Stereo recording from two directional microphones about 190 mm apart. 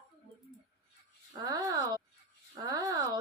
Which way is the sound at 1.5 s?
20° right (ahead or behind).